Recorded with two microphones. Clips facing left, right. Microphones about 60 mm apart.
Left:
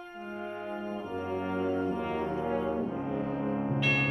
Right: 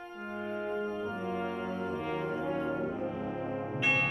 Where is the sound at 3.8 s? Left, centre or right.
Centre.